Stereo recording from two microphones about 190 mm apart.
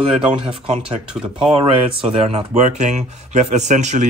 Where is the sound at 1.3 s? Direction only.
25° right (ahead or behind).